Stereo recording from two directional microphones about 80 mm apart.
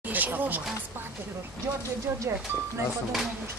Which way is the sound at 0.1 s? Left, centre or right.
Right.